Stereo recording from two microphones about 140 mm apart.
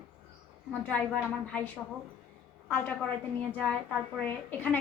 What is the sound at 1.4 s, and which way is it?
Speech, 10° left (ahead or behind).